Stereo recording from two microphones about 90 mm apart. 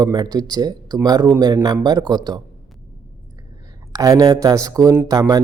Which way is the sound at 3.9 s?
40° right (ahead or behind).